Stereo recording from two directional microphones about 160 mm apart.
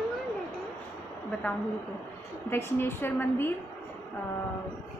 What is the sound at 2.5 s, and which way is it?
Speech, 15° left (ahead or behind).